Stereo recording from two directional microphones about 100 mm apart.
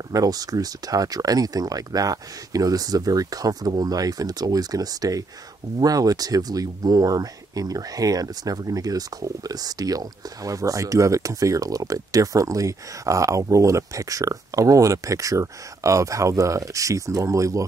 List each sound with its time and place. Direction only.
0.1 s speech: 40° right (ahead or behind)